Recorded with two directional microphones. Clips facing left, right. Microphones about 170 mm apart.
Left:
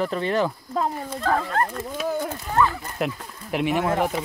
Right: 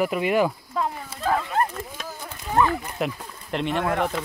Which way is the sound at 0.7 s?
35° left (ahead or behind).